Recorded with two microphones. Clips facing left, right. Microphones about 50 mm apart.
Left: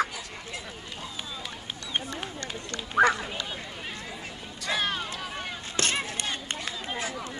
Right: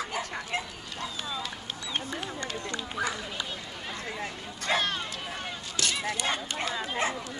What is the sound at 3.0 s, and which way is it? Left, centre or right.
Run, left.